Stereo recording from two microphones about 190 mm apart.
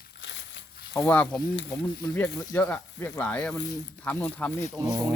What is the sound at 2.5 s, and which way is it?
Speech, 10° left (ahead or behind).